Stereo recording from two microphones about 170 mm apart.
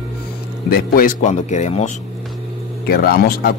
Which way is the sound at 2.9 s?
60° left (ahead or behind).